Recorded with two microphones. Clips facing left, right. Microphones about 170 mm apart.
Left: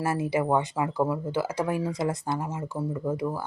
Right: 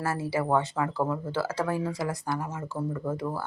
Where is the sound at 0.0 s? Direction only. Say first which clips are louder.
Left 3 dB; 15° left (ahead or behind).